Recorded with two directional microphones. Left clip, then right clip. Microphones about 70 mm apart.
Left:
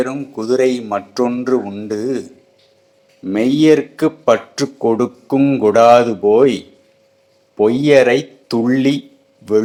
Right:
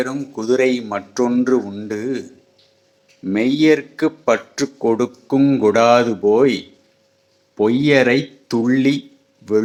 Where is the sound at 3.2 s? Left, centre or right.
Centre.